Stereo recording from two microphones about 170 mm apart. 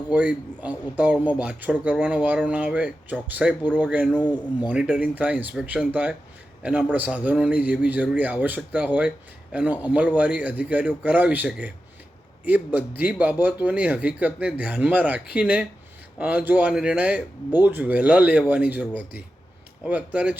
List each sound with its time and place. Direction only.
0.1 s speech: 5° right (ahead or behind)
4.2 s speech: 25° left (ahead or behind)
4.7 s speech: 5° right (ahead or behind)